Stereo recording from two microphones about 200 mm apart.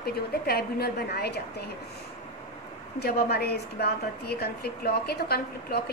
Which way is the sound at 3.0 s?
50° left (ahead or behind).